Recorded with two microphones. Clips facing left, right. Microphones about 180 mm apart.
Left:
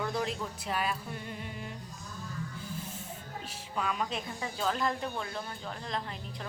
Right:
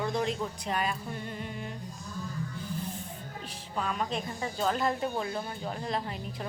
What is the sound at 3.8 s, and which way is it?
Speech, centre (ahead or behind).